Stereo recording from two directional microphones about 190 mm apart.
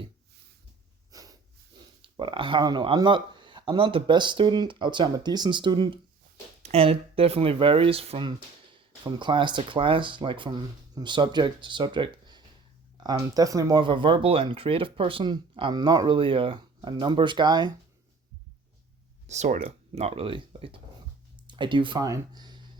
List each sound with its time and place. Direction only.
1.1 s snort: 20° right (ahead or behind)
2.0 s speech: 25° right (ahead or behind)
19.3 s speech: 35° right (ahead or behind); by 22.6 s 20° right (ahead or behind)